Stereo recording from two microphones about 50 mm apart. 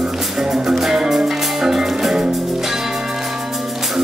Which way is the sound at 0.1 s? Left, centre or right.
Centre.